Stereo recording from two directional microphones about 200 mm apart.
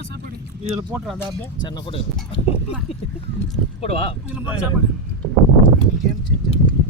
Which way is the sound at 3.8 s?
30° left (ahead or behind).